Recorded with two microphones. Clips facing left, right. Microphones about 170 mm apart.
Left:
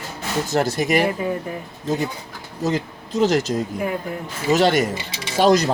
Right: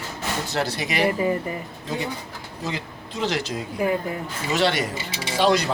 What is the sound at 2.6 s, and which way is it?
Speech, 45° left (ahead or behind).